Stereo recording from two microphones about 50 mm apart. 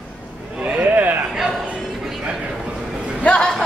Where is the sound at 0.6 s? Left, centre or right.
Right.